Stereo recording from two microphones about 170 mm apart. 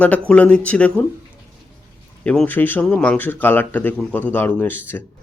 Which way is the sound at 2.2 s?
5° left (ahead or behind).